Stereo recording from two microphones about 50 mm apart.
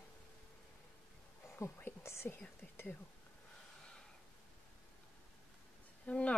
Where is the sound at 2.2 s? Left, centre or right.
Left.